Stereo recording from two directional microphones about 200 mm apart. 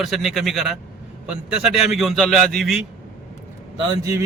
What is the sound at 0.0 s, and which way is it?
A man's voice, centre (ahead or behind).